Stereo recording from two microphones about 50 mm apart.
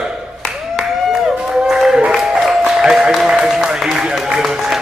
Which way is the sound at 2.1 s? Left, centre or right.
Centre.